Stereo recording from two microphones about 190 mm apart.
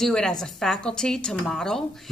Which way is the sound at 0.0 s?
5° left (ahead or behind).